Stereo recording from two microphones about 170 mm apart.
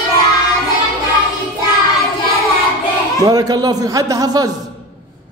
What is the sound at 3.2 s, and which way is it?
A man's voice, 20° right (ahead or behind).